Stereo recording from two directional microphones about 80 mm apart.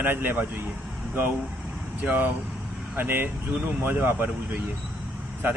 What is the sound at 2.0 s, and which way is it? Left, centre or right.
Speech, right.